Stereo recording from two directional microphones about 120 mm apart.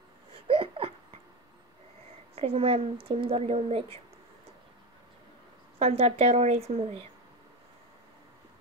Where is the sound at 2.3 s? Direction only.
55° right (ahead or behind).